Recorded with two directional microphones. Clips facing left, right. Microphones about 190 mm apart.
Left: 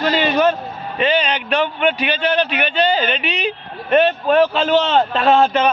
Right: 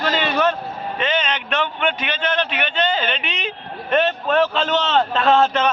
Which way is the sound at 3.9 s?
10° left (ahead or behind).